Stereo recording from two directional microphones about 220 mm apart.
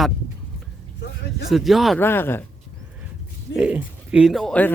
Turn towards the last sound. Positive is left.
turn(degrees=5)  # may be behind; listen again after turning